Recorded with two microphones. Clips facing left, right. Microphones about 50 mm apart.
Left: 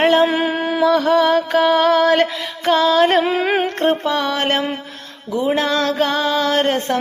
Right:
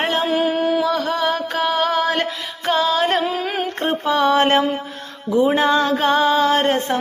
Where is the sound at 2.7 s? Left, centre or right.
Centre.